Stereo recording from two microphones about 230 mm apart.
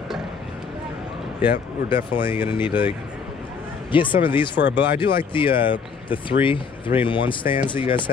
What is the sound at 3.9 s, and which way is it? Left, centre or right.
Speech, left.